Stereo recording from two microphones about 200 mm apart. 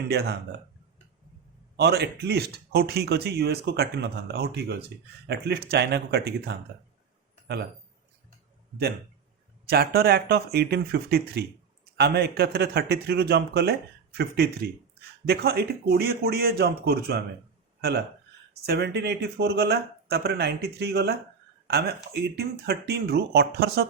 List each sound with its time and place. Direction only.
0.1 s speech: 55° right (ahead or behind)
1.7 s speech: 55° right (ahead or behind)
9.6 s a man's voice: 50° right (ahead or behind)